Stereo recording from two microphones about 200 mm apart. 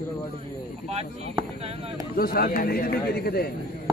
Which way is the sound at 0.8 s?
30° right (ahead or behind).